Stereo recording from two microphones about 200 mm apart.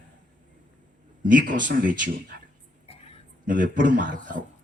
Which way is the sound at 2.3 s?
50° right (ahead or behind).